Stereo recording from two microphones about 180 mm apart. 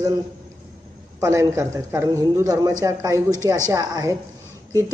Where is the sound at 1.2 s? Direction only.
15° right (ahead or behind).